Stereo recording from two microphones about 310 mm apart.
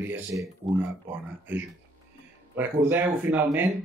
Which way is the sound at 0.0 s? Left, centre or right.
Centre.